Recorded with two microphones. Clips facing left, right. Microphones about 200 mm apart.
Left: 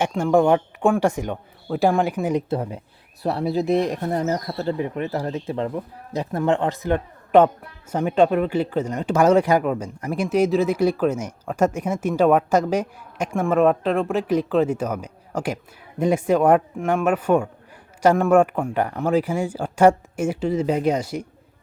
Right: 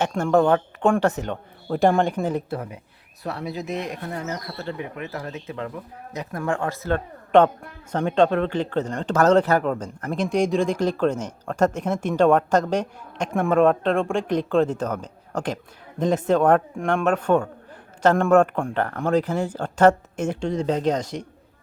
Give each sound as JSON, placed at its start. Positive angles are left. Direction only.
{"t": 0.1, "sound": "speech", "side_deg": 10}
{"t": 2.5, "sound": "speech", "side_deg": 30}